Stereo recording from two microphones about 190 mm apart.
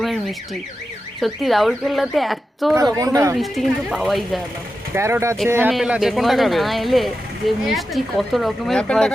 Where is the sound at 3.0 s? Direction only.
20° right (ahead or behind).